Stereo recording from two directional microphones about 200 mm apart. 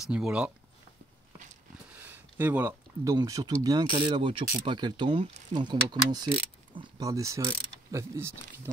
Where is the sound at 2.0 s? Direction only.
10° right (ahead or behind).